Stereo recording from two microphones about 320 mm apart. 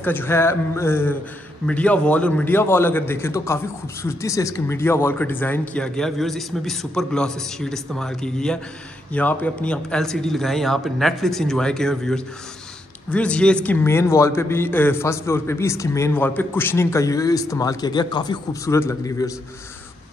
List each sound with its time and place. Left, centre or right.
0.0 s a man's voice: centre